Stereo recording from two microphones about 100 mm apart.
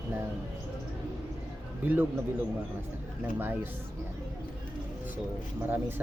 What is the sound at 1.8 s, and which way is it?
Speech, 15° right (ahead or behind).